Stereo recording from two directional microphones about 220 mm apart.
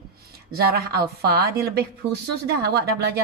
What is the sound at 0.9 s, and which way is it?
A woman's voice, 45° right (ahead or behind).